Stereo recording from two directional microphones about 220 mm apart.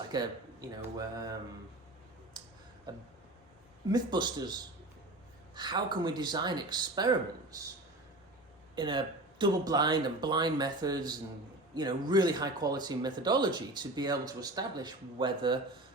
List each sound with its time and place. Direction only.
0.1 s speech: 20° right (ahead or behind)
2.9 s speech: 20° right (ahead or behind)
5.5 s speech: 20° right (ahead or behind)
8.7 s speech: 20° right (ahead or behind)